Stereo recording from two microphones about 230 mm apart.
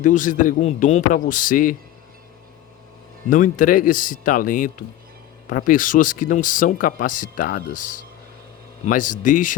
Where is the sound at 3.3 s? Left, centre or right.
Left.